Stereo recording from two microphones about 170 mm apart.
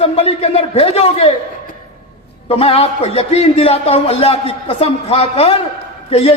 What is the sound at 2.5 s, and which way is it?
A man's voice, 35° left (ahead or behind).